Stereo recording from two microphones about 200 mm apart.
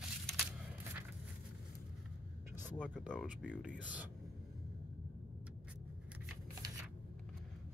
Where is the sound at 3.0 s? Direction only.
Centre (ahead or behind).